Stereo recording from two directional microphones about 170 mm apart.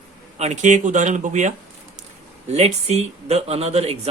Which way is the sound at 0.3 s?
45° right (ahead or behind).